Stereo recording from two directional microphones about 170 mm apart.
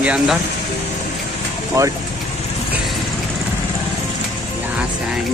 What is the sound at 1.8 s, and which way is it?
Speech, 20° right (ahead or behind).